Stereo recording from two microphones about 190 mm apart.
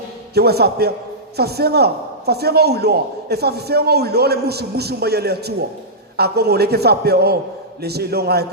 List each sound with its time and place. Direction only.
0.3 s speech: 55° right (ahead or behind)